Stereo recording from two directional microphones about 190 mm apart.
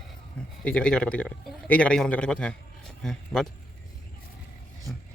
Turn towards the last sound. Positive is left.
turn(degrees=0)  # may be behind; listen again after turning